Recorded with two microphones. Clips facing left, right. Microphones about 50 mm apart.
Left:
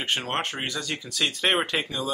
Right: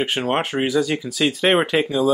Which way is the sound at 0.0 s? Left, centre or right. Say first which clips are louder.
Right 6 dB; centre.